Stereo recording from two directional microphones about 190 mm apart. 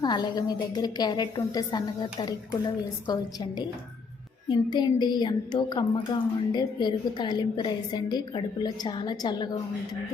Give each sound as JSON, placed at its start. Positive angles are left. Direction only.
{"t": 0.0, "sound": "a woman's voice", "side_deg": 20}
{"t": 4.4, "sound": "a woman's voice", "side_deg": 20}